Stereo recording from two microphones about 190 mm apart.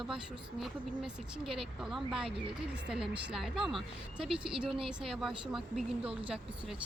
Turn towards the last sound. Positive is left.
turn(degrees=-30)  # may be behind; listen again after turning